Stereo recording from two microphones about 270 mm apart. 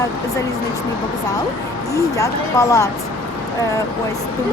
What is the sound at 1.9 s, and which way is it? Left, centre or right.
Speech, centre.